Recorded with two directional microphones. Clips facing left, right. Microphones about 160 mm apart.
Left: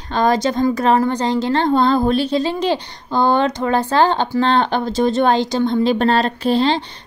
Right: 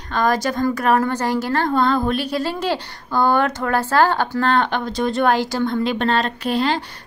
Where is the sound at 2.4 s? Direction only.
20° left (ahead or behind).